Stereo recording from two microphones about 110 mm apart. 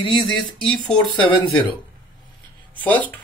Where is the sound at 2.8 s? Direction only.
15° left (ahead or behind).